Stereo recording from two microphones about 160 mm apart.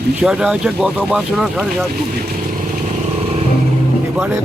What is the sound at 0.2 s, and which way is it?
Speech, 5° right (ahead or behind).